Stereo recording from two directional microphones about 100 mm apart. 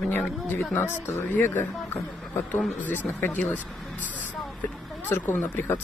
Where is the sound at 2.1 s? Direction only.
5° left (ahead or behind).